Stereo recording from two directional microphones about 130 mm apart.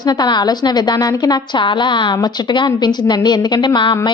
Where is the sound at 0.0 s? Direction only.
35° left (ahead or behind).